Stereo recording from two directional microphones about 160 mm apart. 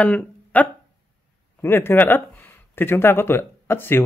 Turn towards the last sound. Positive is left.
turn(degrees=15)  # may be behind; listen again after turning